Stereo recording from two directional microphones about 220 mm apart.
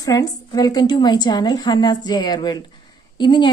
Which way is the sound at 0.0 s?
15° left (ahead or behind).